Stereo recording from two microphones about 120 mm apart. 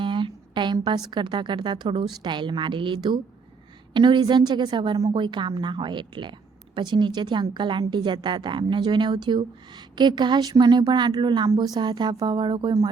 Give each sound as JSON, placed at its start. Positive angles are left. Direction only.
{"t": 0.0, "sound": "a woman's voice", "side_deg": -45}